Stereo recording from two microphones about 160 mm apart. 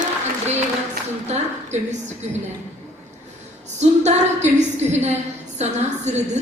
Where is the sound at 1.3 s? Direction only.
45° right (ahead or behind).